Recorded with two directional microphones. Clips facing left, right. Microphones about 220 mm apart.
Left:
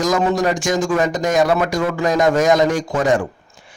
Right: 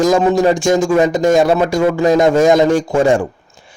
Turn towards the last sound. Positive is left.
turn(degrees=-25)  # may be behind; listen again after turning